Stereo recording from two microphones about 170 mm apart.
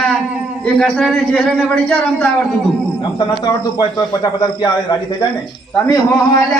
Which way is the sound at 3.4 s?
25° left (ahead or behind).